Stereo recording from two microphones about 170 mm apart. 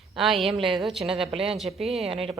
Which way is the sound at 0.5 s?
30° right (ahead or behind).